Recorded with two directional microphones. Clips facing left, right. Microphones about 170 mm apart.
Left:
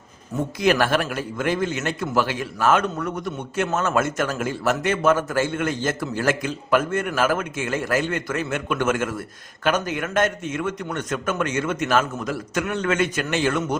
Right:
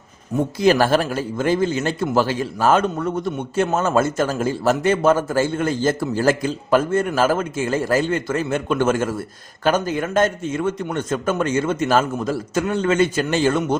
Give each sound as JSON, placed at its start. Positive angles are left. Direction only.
{"t": 0.6, "sound": "speech", "side_deg": -30}